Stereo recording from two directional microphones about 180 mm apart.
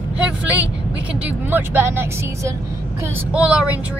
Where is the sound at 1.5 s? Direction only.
10° right (ahead or behind).